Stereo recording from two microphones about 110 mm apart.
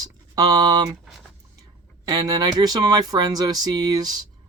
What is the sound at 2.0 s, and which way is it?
Speech, 40° right (ahead or behind).